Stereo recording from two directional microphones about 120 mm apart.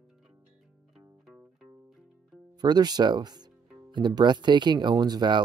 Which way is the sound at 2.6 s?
35° right (ahead or behind).